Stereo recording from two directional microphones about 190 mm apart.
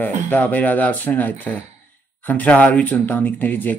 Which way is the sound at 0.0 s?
10° left (ahead or behind).